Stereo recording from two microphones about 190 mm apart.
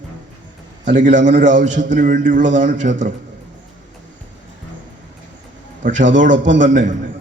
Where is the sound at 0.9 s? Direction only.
40° right (ahead or behind).